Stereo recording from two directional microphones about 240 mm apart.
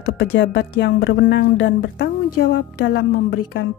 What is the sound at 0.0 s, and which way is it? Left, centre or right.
Speech, left.